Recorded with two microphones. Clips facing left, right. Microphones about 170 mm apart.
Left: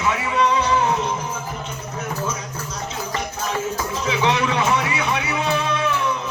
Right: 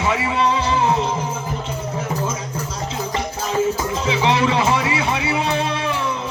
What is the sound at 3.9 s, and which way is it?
Speech, 30° right (ahead or behind).